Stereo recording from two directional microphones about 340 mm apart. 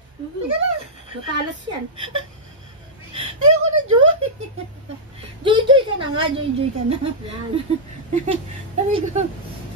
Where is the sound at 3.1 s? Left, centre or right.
Right.